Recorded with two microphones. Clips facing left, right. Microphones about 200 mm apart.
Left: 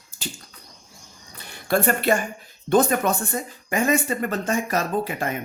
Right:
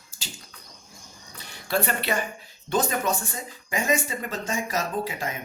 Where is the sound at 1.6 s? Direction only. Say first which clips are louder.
Left 6 dB; 50° left (ahead or behind).